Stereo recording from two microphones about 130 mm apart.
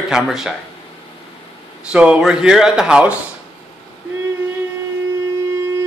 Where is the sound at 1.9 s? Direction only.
10° right (ahead or behind).